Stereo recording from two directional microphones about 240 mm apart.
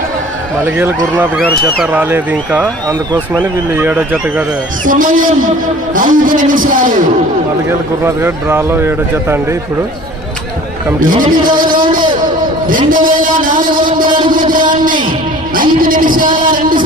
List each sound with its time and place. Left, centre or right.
1.1 s speech: centre
3.7 s speech: centre
4.9 s a man's voice: right
8.0 s speech: centre
11.0 s a man's voice: right
16.4 s a sound: right